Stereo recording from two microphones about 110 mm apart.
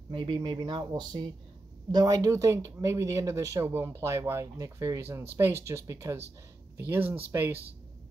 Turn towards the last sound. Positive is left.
turn(degrees=-20)  # may be behind; listen again after turning